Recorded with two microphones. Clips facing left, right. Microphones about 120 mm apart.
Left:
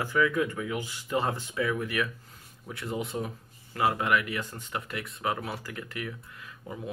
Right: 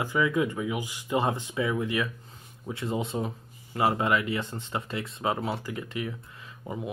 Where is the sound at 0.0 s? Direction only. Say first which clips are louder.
Right 1 dB; 20° right (ahead or behind).